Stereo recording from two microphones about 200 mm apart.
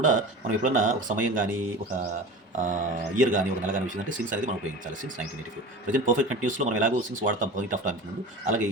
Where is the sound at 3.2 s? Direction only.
40° right (ahead or behind).